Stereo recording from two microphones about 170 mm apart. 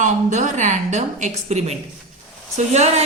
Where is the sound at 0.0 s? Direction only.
45° right (ahead or behind).